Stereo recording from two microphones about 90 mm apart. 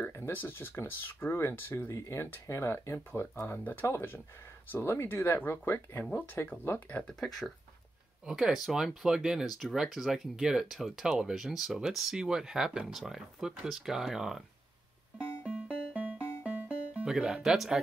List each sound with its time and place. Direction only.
0.0 s speech: 25° left (ahead or behind)
7.0 s speech: 5° left (ahead or behind)
8.3 s speech: 5° right (ahead or behind)
15.4 s music: 15° right (ahead or behind)
17.1 s speech: 5° right (ahead or behind)